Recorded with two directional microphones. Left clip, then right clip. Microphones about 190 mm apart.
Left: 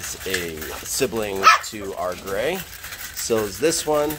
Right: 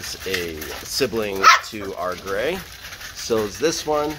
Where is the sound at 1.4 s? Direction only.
30° right (ahead or behind).